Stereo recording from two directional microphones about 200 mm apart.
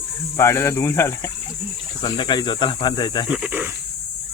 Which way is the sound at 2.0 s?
20° left (ahead or behind).